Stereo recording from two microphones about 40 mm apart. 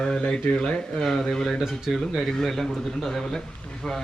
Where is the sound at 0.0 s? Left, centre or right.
Left.